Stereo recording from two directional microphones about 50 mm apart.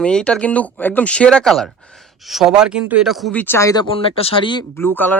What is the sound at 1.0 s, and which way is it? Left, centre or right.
Speech, left.